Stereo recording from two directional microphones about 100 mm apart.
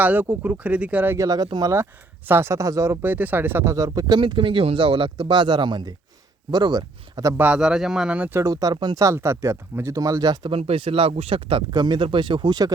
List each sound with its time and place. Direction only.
0.0 s speech: 20° right (ahead or behind)
1.1 s speech: 35° right (ahead or behind)
1.6 s speech: 25° right (ahead or behind)
7.3 s speech: 15° right (ahead or behind)
8.4 s speech: 35° right (ahead or behind)
9.0 s speech: 30° right (ahead or behind)
10.5 s speech: 70° right (ahead or behind); by 12.7 s 45° right (ahead or behind)